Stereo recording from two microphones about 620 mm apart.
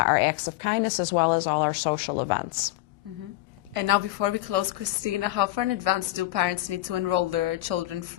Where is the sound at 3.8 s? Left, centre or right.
Right.